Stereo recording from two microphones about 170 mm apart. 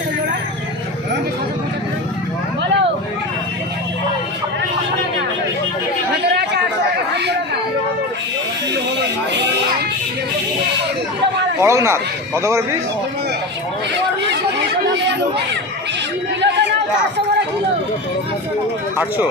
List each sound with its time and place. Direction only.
6.3 s chatter: 75° right (ahead or behind)
11.6 s speech: 15° right (ahead or behind)
16.4 s chatter: 90° right
18.9 s speech: 10° right (ahead or behind)